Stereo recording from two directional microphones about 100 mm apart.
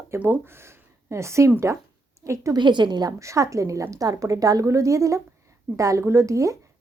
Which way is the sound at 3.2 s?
30° right (ahead or behind).